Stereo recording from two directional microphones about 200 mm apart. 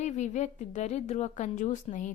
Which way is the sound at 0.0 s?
35° left (ahead or behind).